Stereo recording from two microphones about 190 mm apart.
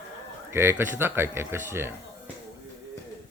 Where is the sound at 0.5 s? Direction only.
10° right (ahead or behind).